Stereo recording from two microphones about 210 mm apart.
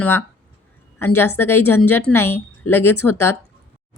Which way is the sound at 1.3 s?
10° left (ahead or behind).